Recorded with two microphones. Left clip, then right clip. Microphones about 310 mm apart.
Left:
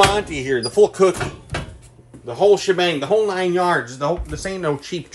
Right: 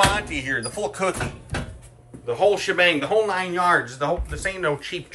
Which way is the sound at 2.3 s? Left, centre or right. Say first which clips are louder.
Left 4 dB; centre.